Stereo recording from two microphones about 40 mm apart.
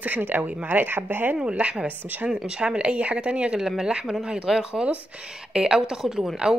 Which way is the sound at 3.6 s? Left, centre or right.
Centre.